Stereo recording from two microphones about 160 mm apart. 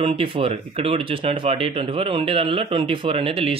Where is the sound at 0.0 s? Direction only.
35° right (ahead or behind).